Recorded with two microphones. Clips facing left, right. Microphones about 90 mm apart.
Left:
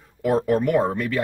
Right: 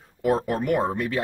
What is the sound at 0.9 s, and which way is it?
Speech, 15° right (ahead or behind).